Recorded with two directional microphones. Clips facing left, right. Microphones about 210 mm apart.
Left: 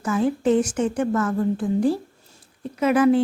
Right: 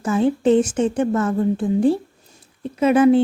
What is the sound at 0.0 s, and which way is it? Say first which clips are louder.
A woman's voice: right 3 dB; 25° right (ahead or behind).